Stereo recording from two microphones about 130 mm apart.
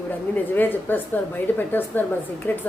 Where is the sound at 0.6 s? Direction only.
15° left (ahead or behind).